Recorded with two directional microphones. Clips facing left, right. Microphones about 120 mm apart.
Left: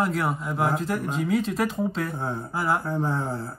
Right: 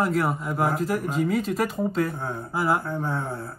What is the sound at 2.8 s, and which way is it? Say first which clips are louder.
Speech: left 2 dB; 25° left (ahead or behind).